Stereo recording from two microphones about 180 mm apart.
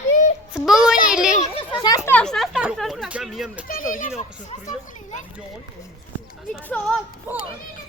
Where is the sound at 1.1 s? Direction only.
5° right (ahead or behind).